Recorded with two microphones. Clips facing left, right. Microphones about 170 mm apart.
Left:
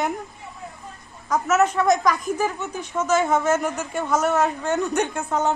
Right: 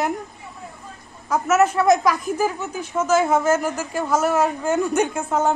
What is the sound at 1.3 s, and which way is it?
A woman's voice, 5° right (ahead or behind).